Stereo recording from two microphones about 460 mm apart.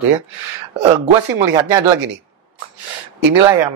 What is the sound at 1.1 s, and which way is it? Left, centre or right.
Speech, right.